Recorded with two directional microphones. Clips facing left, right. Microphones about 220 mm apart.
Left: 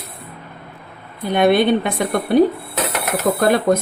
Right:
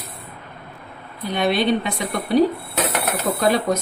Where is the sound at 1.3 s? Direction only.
55° left (ahead or behind).